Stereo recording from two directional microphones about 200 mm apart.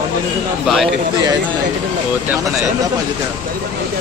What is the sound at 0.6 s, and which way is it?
Speech, centre (ahead or behind).